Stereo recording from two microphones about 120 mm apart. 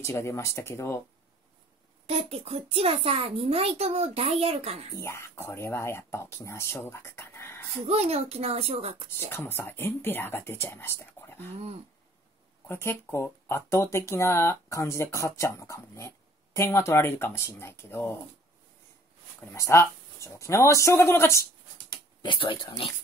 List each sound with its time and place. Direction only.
0.0 s speech: 20° left (ahead or behind)
2.0 s a child's voice: 55° right (ahead or behind)
4.9 s speech: 25° left (ahead or behind)
7.8 s a child's voice: 60° right (ahead or behind)
9.3 s speech: 20° left (ahead or behind)
12.6 s speech: 20° left (ahead or behind)
19.5 s speech: 25° left (ahead or behind)
22.2 s speech: 40° left (ahead or behind)